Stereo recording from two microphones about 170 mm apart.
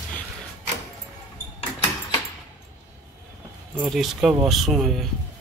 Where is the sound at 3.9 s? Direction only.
Centre (ahead or behind).